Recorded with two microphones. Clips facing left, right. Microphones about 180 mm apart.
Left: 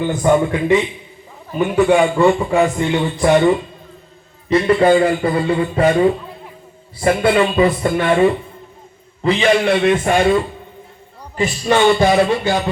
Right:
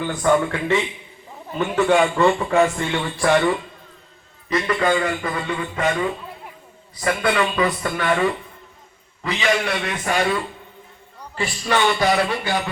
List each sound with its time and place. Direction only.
0.0 s a man's voice: 20° left (ahead or behind)